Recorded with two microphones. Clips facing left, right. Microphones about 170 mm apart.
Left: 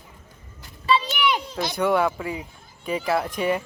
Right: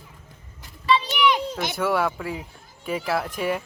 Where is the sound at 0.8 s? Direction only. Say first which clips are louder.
Right 1 dB; 35° left (ahead or behind).